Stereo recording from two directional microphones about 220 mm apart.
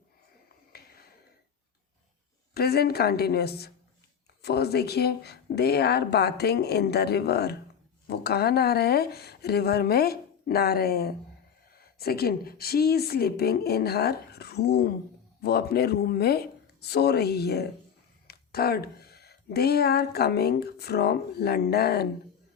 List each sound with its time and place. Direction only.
0.7 s finger snapping: 45° left (ahead or behind)
2.6 s speech: 45° left (ahead or behind)